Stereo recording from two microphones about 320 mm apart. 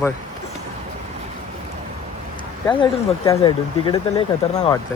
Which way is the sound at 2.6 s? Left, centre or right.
Centre.